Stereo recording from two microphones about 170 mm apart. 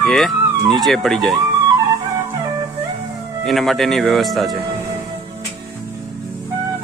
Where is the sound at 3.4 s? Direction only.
Centre (ahead or behind).